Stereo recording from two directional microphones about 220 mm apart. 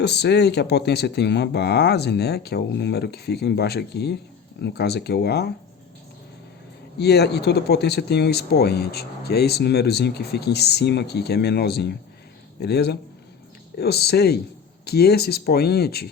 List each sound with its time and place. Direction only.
0.0 s speech: 50° left (ahead or behind)
7.0 s speech: 50° left (ahead or behind)